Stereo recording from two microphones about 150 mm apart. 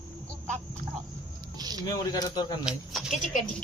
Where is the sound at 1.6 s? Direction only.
25° right (ahead or behind).